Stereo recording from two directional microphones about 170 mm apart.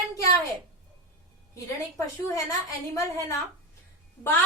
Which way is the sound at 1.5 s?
20° left (ahead or behind).